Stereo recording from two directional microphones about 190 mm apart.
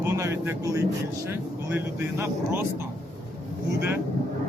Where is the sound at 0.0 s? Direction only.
15° right (ahead or behind).